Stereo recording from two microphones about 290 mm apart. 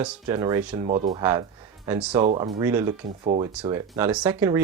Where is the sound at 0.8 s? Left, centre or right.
Right; by 2.2 s centre.